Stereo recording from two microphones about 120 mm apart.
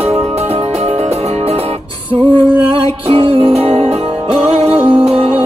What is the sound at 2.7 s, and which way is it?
Music, 50° right (ahead or behind).